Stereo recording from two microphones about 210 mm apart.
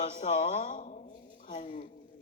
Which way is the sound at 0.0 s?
30° left (ahead or behind).